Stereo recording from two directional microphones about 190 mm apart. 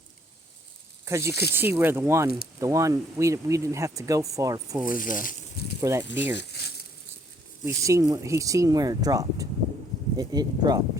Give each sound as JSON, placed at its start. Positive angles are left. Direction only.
{"t": 1.0, "sound": "speech", "side_deg": -15}
{"t": 4.9, "sound": "speech", "side_deg": 45}
{"t": 5.8, "sound": "speech", "side_deg": -15}
{"t": 6.3, "sound": "a sound", "side_deg": 60}
{"t": 7.6, "sound": "speech", "side_deg": -15}